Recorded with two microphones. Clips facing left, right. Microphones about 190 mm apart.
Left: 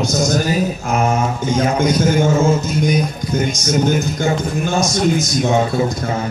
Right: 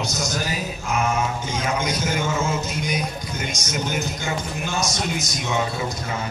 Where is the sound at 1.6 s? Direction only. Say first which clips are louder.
Left 9 dB; 50° left (ahead or behind).